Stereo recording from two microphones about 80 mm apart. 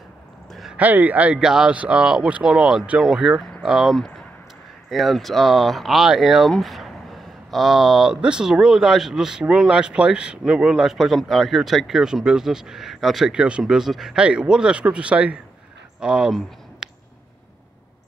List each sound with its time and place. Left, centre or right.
0.5 s a sound: centre
0.7 s speech: right
1.4 s speech: centre
6.5 s a sound: centre
7.5 s speech: centre
14.2 s speech: centre